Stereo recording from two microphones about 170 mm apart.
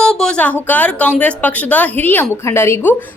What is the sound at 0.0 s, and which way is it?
A woman's voice, 5° left (ahead or behind).